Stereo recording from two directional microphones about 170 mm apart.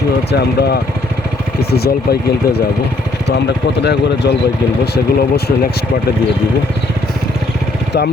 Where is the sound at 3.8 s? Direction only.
75° left (ahead or behind).